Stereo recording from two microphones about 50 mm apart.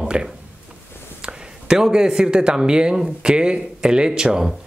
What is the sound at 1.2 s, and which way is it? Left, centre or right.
Speech, centre.